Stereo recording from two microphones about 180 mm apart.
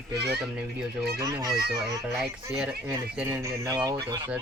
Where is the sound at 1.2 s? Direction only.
20° right (ahead or behind).